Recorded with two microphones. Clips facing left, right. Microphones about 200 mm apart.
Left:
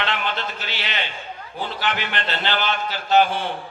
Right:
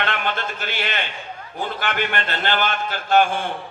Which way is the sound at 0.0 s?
50° right (ahead or behind).